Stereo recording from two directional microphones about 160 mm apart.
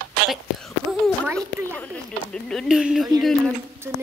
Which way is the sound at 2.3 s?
5° left (ahead or behind).